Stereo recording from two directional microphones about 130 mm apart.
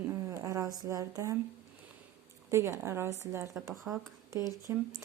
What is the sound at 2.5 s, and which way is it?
Speech, 20° right (ahead or behind).